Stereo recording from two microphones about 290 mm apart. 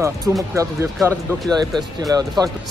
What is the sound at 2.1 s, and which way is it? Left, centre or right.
Speech, centre.